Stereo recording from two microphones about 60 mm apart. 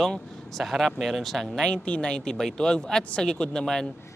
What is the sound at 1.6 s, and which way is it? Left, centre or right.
Speech, centre.